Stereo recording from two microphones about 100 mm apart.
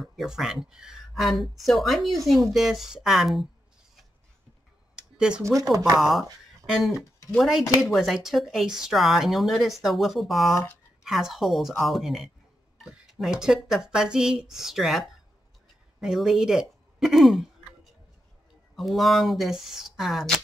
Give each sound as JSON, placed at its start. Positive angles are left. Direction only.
{"t": 0.0, "sound": "speech", "side_deg": 0}
{"t": 4.9, "sound": "a sound", "side_deg": -10}
{"t": 5.4, "sound": "speech", "side_deg": -35}
{"t": 5.9, "sound": "speech", "side_deg": 0}
{"t": 13.3, "sound": "speech", "side_deg": -5}
{"t": 18.8, "sound": "speech", "side_deg": 0}